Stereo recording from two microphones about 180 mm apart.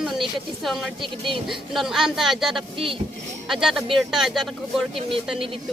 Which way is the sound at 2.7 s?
30° right (ahead or behind).